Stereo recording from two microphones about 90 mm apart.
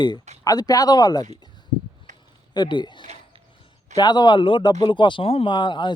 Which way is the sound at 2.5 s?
55° left (ahead or behind).